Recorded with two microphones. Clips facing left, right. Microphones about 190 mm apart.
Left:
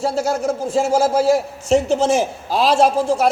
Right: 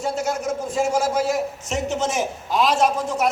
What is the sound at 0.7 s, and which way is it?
A man's voice, 25° left (ahead or behind).